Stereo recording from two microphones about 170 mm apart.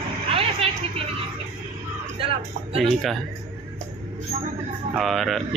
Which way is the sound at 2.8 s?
Centre (ahead or behind).